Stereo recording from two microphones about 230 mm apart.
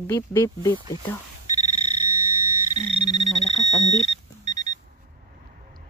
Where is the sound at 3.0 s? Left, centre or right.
Left.